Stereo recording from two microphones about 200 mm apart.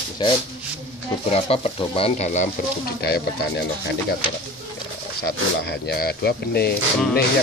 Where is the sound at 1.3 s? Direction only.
30° left (ahead or behind).